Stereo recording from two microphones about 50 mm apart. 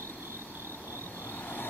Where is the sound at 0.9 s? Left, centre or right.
Left.